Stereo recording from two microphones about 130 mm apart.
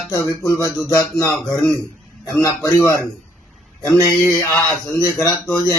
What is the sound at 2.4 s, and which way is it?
Speech, 25° left (ahead or behind).